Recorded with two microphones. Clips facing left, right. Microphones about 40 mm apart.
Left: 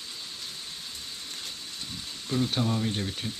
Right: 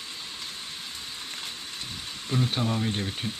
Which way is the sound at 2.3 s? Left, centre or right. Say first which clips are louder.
Even; centre.